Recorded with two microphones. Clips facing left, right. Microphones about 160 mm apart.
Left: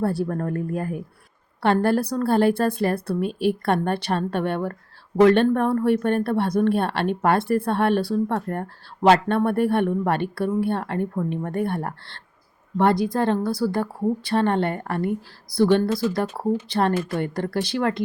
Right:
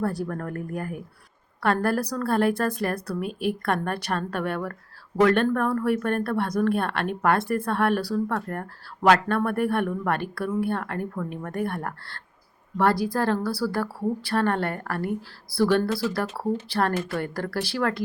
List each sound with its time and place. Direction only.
0.0 s speech: 30° left (ahead or behind)